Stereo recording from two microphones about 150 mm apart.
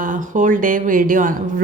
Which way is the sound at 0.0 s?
60° right (ahead or behind).